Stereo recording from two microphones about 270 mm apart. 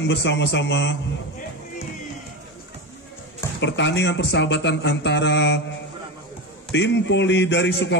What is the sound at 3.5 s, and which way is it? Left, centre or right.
A man's voice, left.